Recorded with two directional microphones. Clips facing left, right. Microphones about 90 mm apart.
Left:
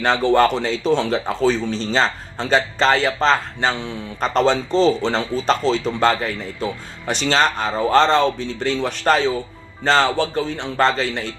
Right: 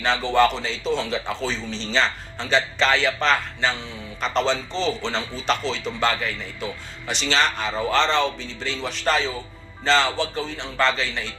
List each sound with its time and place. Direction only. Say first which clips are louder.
0.0 s speech: left 4 dB; 50° left (ahead or behind); by 3.7 s 30° left (ahead or behind)
4.2 s speech: left 5 dB; 45° left (ahead or behind)